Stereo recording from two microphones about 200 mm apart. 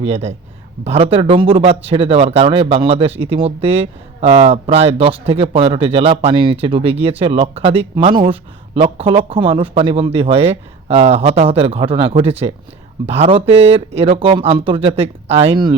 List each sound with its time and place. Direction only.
0.0 s speech: 30° right (ahead or behind)